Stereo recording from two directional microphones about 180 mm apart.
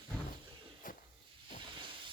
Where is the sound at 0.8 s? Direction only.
50° left (ahead or behind).